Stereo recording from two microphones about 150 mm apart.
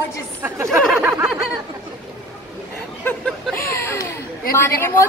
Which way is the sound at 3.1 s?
5° left (ahead or behind).